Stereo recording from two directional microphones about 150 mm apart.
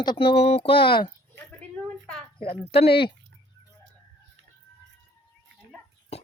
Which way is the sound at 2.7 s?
40° left (ahead or behind).